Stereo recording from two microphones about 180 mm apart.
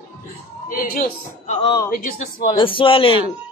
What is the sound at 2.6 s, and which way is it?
Speech, 30° left (ahead or behind).